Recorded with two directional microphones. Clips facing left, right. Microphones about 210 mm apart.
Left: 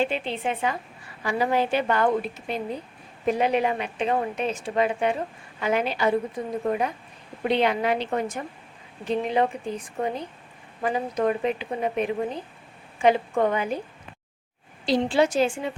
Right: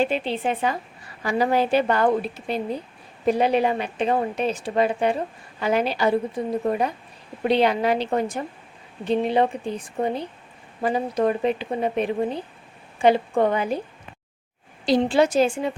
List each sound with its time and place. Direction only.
0.0 s speech: 35° right (ahead or behind)
14.8 s speech: 40° right (ahead or behind)